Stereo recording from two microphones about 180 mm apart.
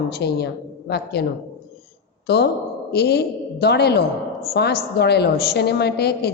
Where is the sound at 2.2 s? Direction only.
65° left (ahead or behind).